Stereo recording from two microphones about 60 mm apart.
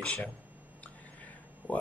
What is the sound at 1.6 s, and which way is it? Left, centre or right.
Speech, right.